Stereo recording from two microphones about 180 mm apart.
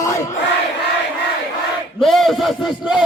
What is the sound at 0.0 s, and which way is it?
Crowd, 15° left (ahead or behind).